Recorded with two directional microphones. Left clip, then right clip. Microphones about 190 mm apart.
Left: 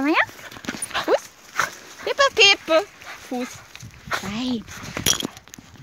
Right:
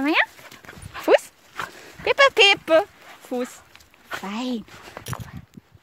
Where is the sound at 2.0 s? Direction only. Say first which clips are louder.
Right 1 dB; 40° right (ahead or behind).